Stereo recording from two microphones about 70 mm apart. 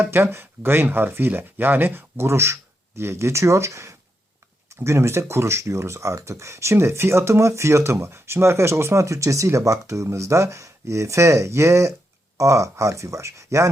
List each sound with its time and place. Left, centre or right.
0.0 s speech: right